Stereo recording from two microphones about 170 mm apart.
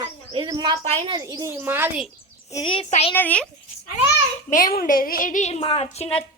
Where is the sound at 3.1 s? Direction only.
10° left (ahead or behind).